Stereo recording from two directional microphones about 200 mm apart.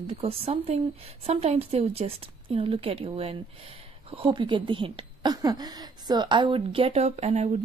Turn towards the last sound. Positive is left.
turn(degrees=-35)  # may be behind; listen again after turning